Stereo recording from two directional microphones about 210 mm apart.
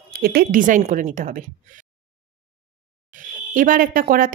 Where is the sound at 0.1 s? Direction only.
45° right (ahead or behind).